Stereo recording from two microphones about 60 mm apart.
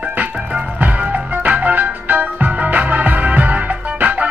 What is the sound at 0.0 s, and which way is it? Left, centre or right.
Music, right.